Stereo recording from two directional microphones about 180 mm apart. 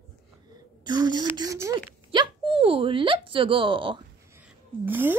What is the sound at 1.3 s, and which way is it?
Speech, 20° right (ahead or behind).